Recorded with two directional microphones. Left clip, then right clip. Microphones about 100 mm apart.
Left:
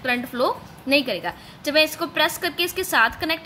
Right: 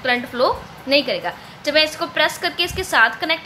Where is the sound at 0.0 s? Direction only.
40° left (ahead or behind).